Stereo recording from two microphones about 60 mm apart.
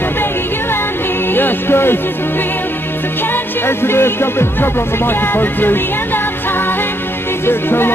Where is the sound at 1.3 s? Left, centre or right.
Left.